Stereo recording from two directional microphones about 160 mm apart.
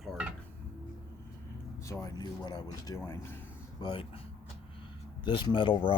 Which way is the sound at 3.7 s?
30° left (ahead or behind).